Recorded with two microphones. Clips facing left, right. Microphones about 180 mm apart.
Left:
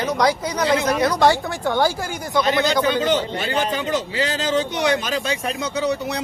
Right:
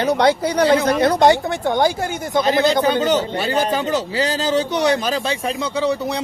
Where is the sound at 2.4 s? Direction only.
35° right (ahead or behind).